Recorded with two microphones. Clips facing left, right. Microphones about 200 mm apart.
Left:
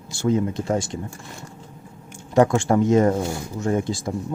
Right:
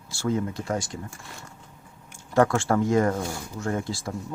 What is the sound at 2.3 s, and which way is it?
Speech, 15° left (ahead or behind).